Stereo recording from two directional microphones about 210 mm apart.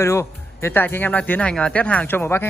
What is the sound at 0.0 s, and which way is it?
Speech, 15° left (ahead or behind).